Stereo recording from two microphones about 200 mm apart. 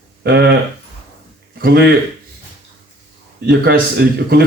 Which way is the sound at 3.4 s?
55° right (ahead or behind).